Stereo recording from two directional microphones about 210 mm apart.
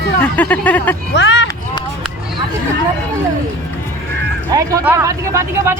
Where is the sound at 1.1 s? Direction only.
55° left (ahead or behind).